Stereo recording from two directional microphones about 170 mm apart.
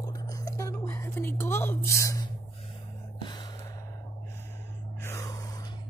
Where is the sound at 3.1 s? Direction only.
25° left (ahead or behind).